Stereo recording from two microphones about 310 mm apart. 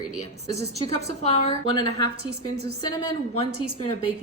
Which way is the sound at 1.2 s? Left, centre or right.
Centre.